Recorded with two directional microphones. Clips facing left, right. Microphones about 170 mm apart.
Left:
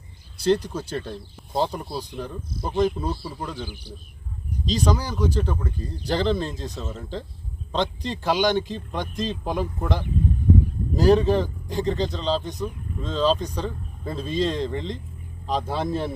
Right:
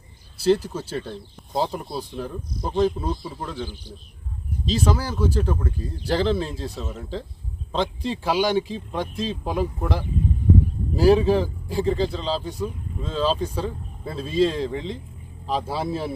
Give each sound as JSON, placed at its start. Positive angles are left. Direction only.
{"t": 0.4, "sound": "speech", "side_deg": -5}